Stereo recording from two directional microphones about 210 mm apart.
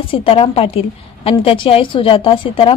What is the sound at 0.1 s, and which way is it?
A woman's voice, 25° left (ahead or behind).